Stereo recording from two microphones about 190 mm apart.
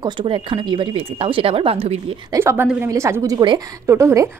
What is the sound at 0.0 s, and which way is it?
Speech, 25° right (ahead or behind).